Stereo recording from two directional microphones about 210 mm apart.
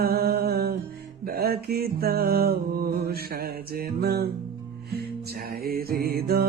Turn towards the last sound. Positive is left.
turn(degrees=-45)  # may be behind; listen again after turning